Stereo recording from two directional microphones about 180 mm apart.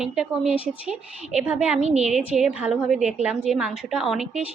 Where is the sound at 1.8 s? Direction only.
35° right (ahead or behind).